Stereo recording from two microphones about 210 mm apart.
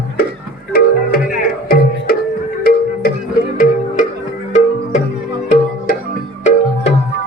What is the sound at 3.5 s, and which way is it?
Music, 40° left (ahead or behind).